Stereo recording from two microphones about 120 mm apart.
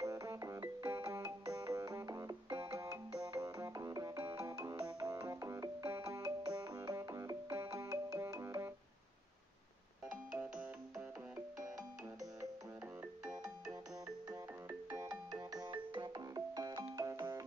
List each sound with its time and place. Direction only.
0.0 s music: 30° right (ahead or behind)
10.4 s music: 10° right (ahead or behind)
13.2 s music: 10° right (ahead or behind)
14.0 s music: 30° right (ahead or behind)